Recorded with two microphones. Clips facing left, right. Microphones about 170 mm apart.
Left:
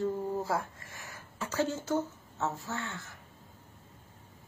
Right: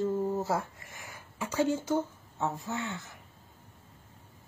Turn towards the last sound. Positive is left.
turn(degrees=-20)  # may be behind; listen again after turning